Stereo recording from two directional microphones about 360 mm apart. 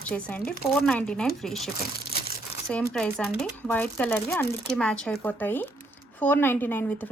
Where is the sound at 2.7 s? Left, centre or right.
Centre.